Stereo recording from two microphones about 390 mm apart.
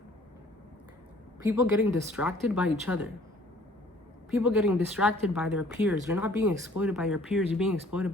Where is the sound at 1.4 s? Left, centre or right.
Centre.